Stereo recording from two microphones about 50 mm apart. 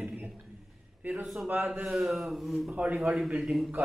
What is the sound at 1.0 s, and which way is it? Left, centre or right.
Speech, right.